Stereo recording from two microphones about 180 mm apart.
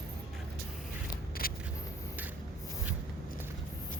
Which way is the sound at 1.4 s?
55° left (ahead or behind).